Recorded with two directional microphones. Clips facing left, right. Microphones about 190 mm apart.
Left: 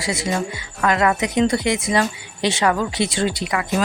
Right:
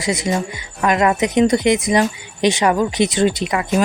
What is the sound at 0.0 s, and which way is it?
A woman's voice, 20° right (ahead or behind).